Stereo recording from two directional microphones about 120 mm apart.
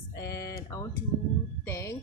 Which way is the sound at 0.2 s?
25° left (ahead or behind).